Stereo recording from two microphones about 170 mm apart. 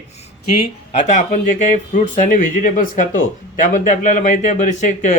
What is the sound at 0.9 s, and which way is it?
Speech, 45° left (ahead or behind).